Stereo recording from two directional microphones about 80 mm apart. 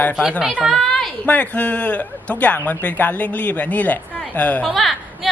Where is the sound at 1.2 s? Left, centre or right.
Centre.